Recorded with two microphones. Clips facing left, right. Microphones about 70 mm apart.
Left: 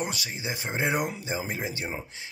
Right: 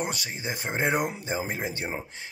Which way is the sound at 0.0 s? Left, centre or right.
Right.